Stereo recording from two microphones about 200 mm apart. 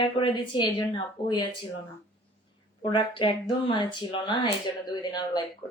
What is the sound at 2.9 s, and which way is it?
Speech, 25° left (ahead or behind).